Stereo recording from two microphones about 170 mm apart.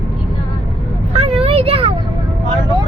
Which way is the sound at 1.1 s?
35° right (ahead or behind).